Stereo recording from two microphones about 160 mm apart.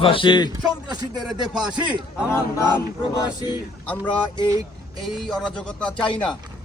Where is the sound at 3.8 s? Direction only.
10° left (ahead or behind).